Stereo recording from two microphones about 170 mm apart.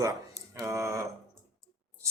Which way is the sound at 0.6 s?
15° right (ahead or behind).